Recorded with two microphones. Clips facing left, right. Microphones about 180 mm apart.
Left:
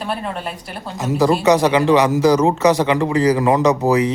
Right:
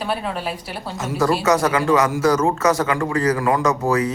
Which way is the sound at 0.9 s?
15° left (ahead or behind).